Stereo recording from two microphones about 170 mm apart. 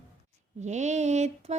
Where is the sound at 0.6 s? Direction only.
45° right (ahead or behind).